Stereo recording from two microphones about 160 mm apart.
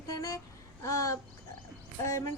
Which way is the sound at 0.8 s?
20° left (ahead or behind).